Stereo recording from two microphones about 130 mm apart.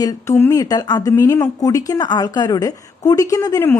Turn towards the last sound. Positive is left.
turn(degrees=25)  # may be behind; listen again after turning